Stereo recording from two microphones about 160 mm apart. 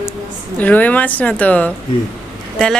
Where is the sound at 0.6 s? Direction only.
10° left (ahead or behind).